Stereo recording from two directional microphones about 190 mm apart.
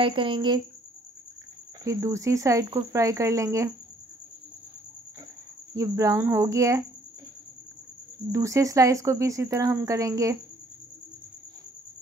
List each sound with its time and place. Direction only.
0.0 s speech: 25° right (ahead or behind)
1.9 s speech: 15° right (ahead or behind)
5.8 s speech: 15° right (ahead or behind)
8.3 s speech: 15° right (ahead or behind)